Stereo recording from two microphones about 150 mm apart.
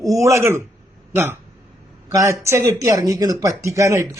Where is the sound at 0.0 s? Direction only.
20° right (ahead or behind).